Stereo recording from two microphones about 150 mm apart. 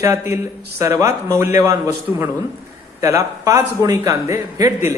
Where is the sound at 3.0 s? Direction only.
20° right (ahead or behind).